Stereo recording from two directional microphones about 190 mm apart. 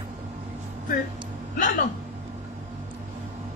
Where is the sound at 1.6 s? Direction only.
45° left (ahead or behind).